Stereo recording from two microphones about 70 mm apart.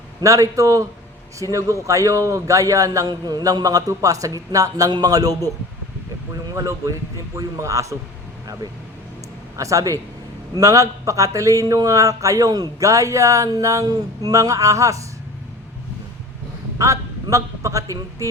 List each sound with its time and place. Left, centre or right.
0.2 s speech: right
3.1 s a man's voice: right
4.9 s a man's voice: right
6.5 s speech: right
9.6 s speech: right
16.7 s a woman's voice: right